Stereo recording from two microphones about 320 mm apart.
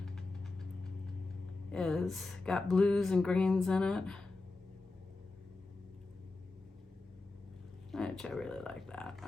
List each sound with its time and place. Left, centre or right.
1.7 s speech: centre
7.9 s speech: centre